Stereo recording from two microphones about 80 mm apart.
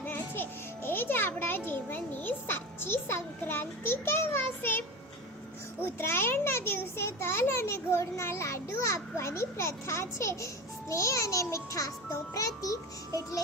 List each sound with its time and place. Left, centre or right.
0.0 s music: left
0.9 s a child's voice: left
5.8 s a child's voice: left